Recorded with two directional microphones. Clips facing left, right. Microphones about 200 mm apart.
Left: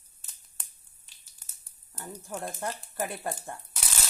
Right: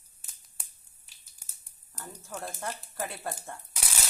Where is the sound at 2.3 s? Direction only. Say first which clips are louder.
Left 2 dB; 15° left (ahead or behind).